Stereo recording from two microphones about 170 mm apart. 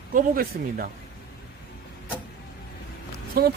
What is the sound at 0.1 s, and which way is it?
Speech, 55° right (ahead or behind).